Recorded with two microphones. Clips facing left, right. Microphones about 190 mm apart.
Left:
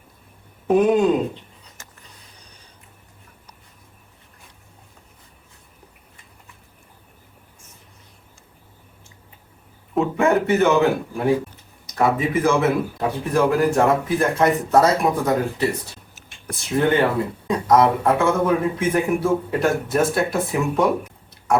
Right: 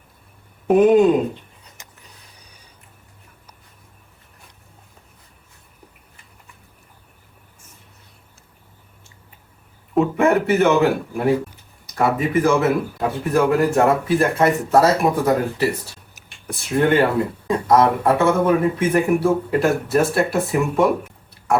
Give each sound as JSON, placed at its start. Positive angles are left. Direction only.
{"t": 0.7, "sound": "a man's voice", "side_deg": 0}
{"t": 1.8, "sound": "a sound", "side_deg": -15}
{"t": 9.9, "sound": "a man's voice", "side_deg": 0}
{"t": 11.9, "sound": "a man's voice", "side_deg": 0}